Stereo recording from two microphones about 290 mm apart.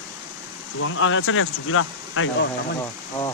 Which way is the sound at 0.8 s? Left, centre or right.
Left.